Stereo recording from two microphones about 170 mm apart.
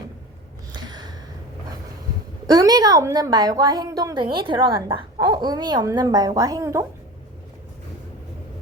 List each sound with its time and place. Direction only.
0.7 s gasp: 25° right (ahead or behind)
2.5 s speech: 20° right (ahead or behind)